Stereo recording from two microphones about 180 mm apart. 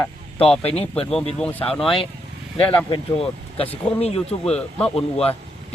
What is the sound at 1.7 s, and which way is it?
Speech, centre (ahead or behind).